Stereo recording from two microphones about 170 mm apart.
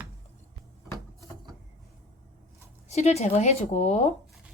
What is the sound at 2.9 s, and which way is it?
A woman's voice, 40° left (ahead or behind).